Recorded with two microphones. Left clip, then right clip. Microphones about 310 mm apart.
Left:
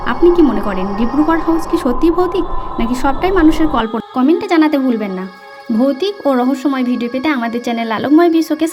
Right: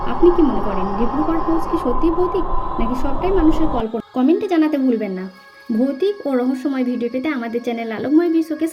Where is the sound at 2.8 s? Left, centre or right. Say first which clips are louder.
Left 10 dB; left.